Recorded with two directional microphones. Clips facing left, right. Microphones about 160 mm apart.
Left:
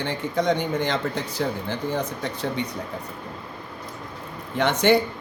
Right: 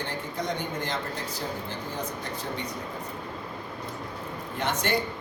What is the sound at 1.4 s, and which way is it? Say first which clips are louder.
Speech: left 10 dB; 90° left.